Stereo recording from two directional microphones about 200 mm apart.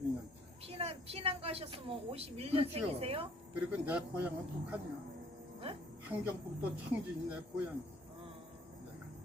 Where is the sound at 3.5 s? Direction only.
5° right (ahead or behind).